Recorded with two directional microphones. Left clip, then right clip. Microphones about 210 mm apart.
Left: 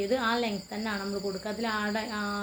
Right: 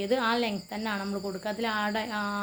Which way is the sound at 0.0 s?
40° right (ahead or behind).